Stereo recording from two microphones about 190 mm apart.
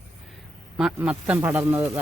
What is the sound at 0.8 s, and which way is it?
Speech, 5° right (ahead or behind).